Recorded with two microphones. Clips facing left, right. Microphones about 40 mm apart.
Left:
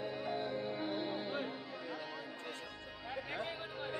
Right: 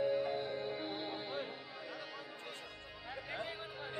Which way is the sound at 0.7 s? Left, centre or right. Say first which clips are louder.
Left 3 dB; centre.